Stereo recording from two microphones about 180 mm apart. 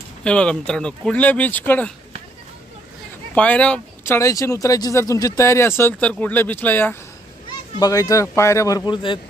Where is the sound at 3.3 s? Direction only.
5° left (ahead or behind).